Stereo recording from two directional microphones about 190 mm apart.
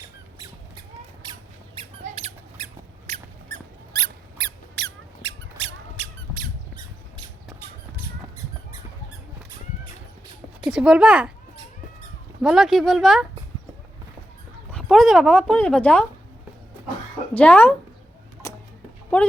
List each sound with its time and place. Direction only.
1.2 s squeak: 25° right (ahead or behind)
3.9 s squeak: 55° right (ahead or behind)
10.6 s speech: 5° right (ahead or behind)
12.4 s speech: centre (ahead or behind)
14.7 s speech: 5° left (ahead or behind)
17.3 s speech: 10° left (ahead or behind)